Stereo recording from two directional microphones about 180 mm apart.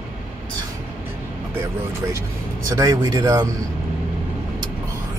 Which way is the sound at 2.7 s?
20° right (ahead or behind).